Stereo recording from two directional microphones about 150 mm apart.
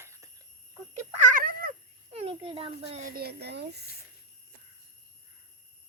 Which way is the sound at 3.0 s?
85° right.